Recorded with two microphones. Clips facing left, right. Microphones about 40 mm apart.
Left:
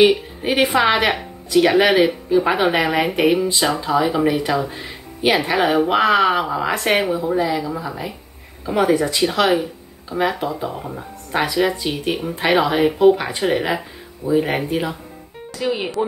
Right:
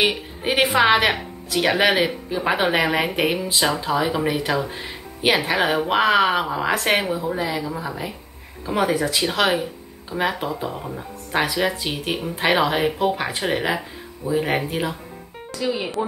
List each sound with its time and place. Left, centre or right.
0.0 s a woman's voice: centre
15.6 s speech: left